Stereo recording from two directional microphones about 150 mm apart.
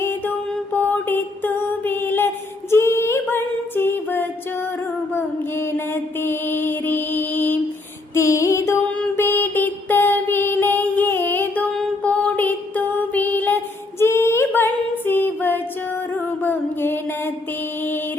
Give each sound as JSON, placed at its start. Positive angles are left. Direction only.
{"t": 0.0, "sound": "music", "side_deg": 15}
{"t": 5.1, "sound": "mantra", "side_deg": 15}
{"t": 8.1, "sound": "music", "side_deg": 20}
{"t": 14.0, "sound": "female singing", "side_deg": 15}
{"t": 16.1, "sound": "mantra", "side_deg": 15}